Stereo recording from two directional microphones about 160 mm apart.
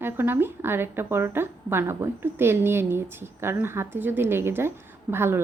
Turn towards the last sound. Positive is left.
turn(degrees=-15)  # may be behind; listen again after turning